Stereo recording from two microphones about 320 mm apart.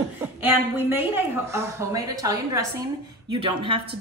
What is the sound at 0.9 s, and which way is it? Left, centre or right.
Speech, centre.